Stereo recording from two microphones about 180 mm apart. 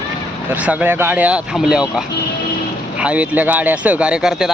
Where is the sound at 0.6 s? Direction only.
10° right (ahead or behind).